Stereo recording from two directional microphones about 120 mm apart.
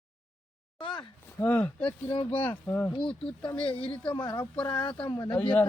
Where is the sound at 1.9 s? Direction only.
35° left (ahead or behind).